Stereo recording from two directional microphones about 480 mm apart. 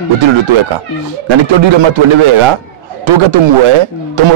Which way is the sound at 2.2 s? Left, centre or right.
Right.